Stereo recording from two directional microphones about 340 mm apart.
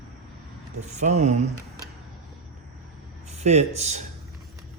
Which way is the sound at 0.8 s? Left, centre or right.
Centre.